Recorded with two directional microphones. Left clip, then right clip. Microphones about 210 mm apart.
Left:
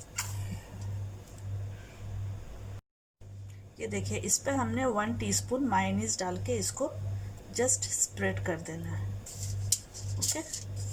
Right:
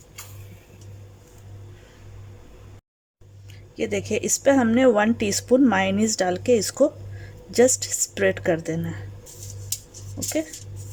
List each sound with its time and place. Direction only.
3.8 s speech: 45° right (ahead or behind)